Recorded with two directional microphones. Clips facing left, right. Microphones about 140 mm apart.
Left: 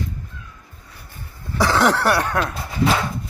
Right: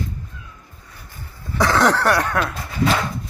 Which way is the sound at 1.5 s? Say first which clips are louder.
Right 1 dB; 15° left (ahead or behind).